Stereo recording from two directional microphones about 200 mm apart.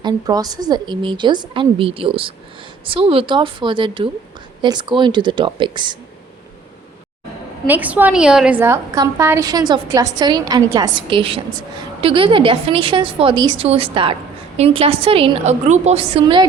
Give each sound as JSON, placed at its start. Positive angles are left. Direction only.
{"t": 0.0, "sound": "a woman's voice", "side_deg": -20}
{"t": 7.7, "sound": "a woman's voice", "side_deg": -10}